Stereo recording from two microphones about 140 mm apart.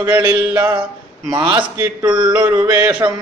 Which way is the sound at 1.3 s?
35° right (ahead or behind).